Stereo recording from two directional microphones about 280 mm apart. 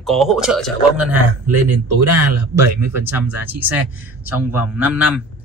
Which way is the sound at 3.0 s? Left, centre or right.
Centre.